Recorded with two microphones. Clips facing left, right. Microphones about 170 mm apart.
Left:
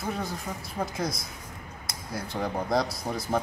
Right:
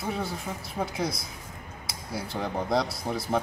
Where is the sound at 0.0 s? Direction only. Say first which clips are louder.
Right 1 dB; centre (ahead or behind).